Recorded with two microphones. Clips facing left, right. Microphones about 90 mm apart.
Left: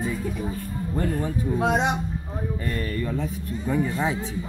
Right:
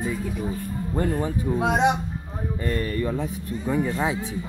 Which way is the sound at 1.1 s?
10° right (ahead or behind).